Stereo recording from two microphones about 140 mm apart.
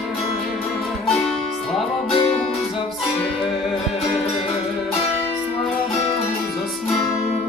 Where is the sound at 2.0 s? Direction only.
45° left (ahead or behind).